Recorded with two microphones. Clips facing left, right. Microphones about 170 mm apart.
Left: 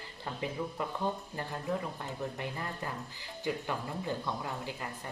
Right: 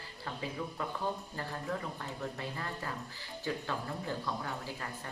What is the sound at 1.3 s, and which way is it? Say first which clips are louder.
Speech: left 3 dB; 15° left (ahead or behind).